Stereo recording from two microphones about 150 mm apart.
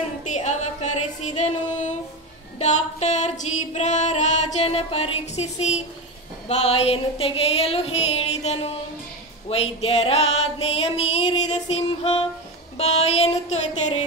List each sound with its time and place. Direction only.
0.3 s music: 50° left (ahead or behind)
6.4 s a sound: 40° left (ahead or behind)
9.5 s music: 40° left (ahead or behind)